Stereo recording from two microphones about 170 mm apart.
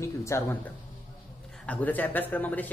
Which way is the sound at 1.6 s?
10° left (ahead or behind).